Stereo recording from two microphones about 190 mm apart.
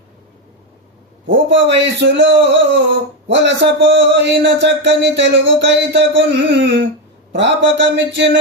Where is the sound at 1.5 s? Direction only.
70° right (ahead or behind).